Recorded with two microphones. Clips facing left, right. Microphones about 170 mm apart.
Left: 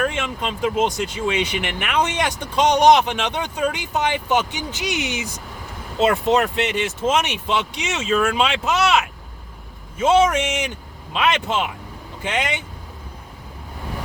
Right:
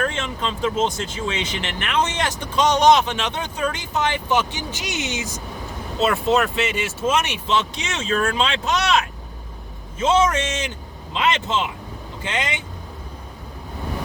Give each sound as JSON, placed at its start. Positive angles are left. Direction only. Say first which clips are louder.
{"t": 0.0, "sound": "speech", "louder": "left 1 dB", "side_deg": 10}
{"t": 10.3, "sound": "speech", "louder": "left 2 dB", "side_deg": 15}